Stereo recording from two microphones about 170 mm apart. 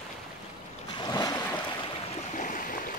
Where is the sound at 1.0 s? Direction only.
20° left (ahead or behind).